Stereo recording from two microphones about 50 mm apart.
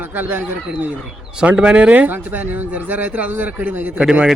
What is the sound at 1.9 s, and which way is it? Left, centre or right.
A man's voice, right.